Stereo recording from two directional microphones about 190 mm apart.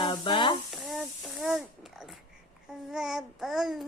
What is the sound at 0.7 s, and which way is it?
A child's voice, centre (ahead or behind).